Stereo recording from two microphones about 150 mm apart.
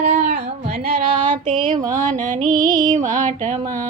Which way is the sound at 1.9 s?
60° right (ahead or behind).